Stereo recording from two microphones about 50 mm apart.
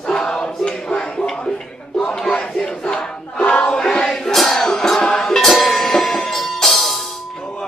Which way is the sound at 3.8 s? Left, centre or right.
Centre.